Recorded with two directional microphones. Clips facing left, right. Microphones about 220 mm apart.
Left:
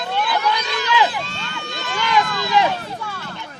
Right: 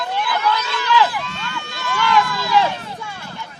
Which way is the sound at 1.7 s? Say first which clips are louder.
Right 2 dB; 20° left (ahead or behind).